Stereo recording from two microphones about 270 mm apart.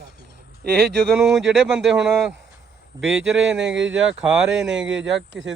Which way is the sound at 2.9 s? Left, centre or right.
Centre.